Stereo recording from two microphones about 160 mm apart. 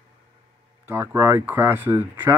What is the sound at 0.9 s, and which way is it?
Speech, 15° right (ahead or behind).